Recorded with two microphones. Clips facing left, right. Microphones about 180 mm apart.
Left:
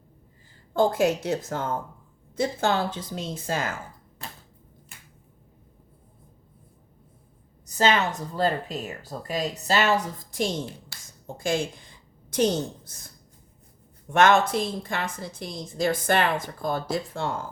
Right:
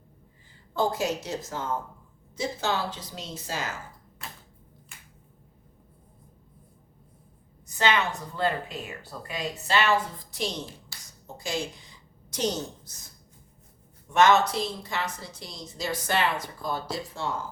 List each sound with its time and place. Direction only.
0.7 s a woman's voice: 50° left (ahead or behind)
7.6 s a woman's voice: 40° left (ahead or behind)
14.1 s a woman's voice: 55° left (ahead or behind)